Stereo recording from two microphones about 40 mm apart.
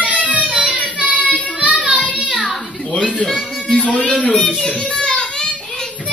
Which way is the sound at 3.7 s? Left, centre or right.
Left.